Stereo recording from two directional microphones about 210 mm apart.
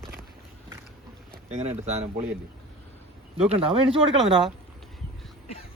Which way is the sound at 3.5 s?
25° right (ahead or behind).